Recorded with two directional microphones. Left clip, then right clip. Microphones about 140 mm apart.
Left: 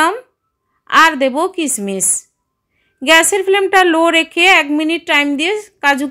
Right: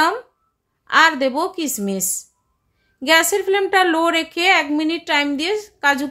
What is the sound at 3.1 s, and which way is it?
A woman's voice, 20° left (ahead or behind).